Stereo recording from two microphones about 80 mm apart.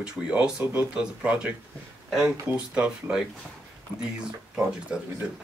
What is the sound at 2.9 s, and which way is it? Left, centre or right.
Speech, centre.